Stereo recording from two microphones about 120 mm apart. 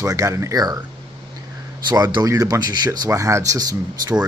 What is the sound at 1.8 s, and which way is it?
Speech, 35° right (ahead or behind).